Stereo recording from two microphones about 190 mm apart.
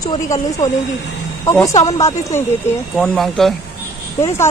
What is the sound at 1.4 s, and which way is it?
Speech, 15° left (ahead or behind).